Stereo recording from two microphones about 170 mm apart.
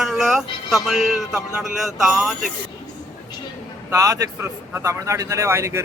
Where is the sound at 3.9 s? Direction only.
20° right (ahead or behind).